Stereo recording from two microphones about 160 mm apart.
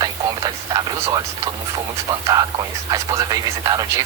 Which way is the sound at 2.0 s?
25° right (ahead or behind).